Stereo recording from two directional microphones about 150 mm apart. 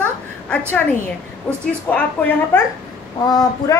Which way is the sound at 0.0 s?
10° left (ahead or behind).